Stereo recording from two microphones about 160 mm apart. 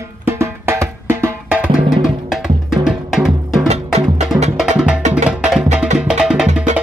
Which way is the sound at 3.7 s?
40° right (ahead or behind).